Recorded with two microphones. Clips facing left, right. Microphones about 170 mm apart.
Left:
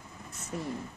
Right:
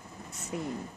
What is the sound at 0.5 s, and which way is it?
Speech, 10° right (ahead or behind).